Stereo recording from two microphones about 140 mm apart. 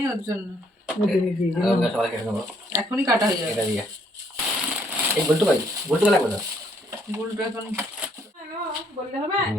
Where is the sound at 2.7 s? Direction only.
20° right (ahead or behind).